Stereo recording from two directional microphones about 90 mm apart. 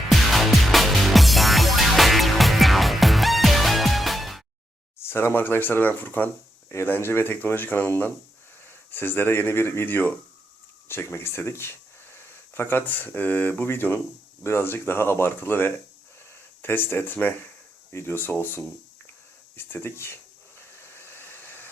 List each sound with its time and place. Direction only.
0.1 s music: centre (ahead or behind)
5.0 s speech: 25° left (ahead or behind)
20.7 s hair dryer: 25° left (ahead or behind)